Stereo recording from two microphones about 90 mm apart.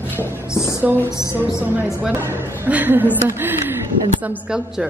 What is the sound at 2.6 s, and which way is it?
A woman's voice, 20° right (ahead or behind).